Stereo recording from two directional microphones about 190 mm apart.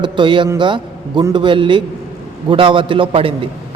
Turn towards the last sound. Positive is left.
turn(degrees=-30)  # may be behind; listen again after turning